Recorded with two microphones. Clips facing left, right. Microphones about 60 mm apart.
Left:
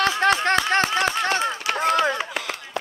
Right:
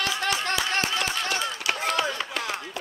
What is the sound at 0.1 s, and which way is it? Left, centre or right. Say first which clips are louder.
Clapping: left 7 dB; left.